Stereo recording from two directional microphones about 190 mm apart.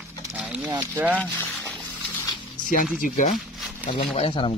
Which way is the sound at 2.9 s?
45° left (ahead or behind).